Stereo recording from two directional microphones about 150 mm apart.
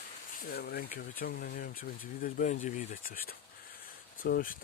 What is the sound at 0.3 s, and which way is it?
Speech, 90° left.